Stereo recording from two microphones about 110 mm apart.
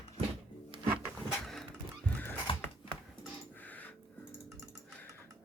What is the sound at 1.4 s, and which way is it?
Music, 5° left (ahead or behind).